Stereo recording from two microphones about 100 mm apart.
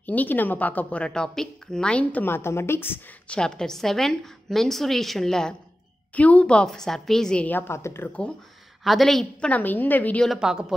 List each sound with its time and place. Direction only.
0.0 s a woman's voice: 15° left (ahead or behind)
3.3 s a woman's voice: 5° left (ahead or behind); by 8.1 s 25° left (ahead or behind)
8.8 s a woman's voice: centre (ahead or behind)
9.5 s a woman's voice: 15° left (ahead or behind)
10.2 s a woman's voice: 5° right (ahead or behind)